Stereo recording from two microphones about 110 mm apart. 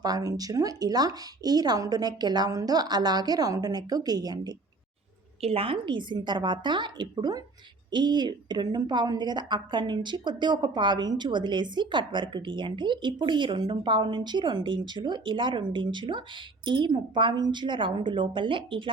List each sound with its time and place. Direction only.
0.0 s a woman's voice: 35° right (ahead or behind)
5.4 s a woman's voice: 60° right (ahead or behind)